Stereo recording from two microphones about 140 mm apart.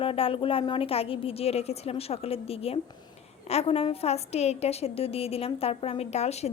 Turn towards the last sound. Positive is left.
turn(degrees=50)  # may be behind; listen again after turning